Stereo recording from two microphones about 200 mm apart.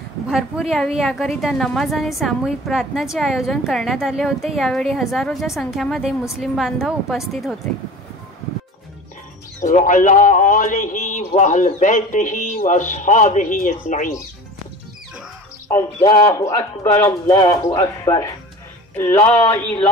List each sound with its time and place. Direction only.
0.3 s a woman's voice: centre (ahead or behind)
9.6 s speech: 40° left (ahead or behind)
15.7 s speech: 20° left (ahead or behind)